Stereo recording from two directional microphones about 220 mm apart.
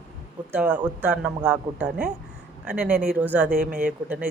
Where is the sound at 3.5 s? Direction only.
40° right (ahead or behind).